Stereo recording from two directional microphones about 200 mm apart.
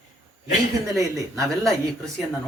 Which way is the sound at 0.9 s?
15° right (ahead or behind).